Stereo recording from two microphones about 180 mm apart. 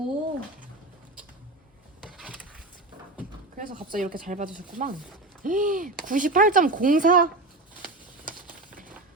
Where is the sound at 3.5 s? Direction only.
50° right (ahead or behind).